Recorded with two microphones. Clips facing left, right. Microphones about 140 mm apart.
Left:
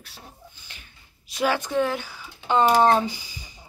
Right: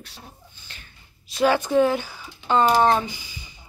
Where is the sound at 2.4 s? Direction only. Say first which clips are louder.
Even; 15° left (ahead or behind).